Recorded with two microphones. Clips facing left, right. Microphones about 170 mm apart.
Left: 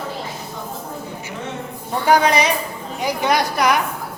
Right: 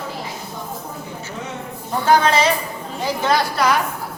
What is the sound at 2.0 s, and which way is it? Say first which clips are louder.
A woman's voice: even; 15° left (ahead or behind).